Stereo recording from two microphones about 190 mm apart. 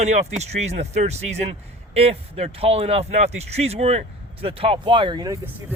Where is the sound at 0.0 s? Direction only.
35° right (ahead or behind).